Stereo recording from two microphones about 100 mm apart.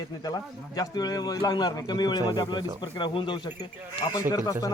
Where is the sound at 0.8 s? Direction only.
40° left (ahead or behind).